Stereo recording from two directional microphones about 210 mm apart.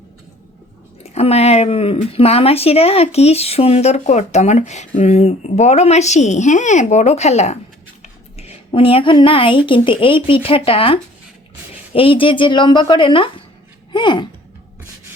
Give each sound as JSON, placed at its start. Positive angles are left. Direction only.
{"t": 1.0, "sound": "speech", "side_deg": 30}